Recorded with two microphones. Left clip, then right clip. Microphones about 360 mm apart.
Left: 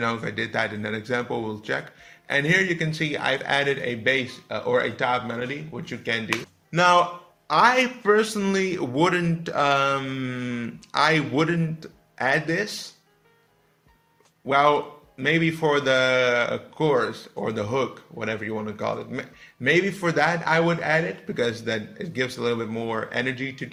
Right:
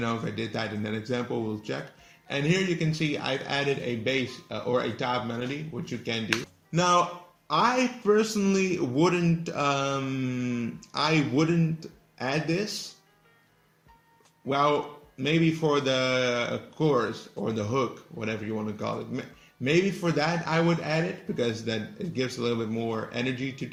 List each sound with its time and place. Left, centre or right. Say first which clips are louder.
0.0 s a man's voice: left 5 dB; left
2.2 s a man's voice: left 6 dB; left
14.5 s a man's voice: left 5 dB; left
22.7 s speech: left 3 dB; left
23.1 s a man's voice: left 4 dB; left